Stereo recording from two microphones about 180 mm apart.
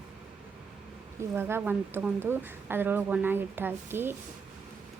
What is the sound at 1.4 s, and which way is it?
Speech, 10° right (ahead or behind).